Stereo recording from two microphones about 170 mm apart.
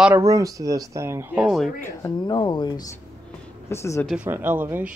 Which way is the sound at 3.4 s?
15° left (ahead or behind).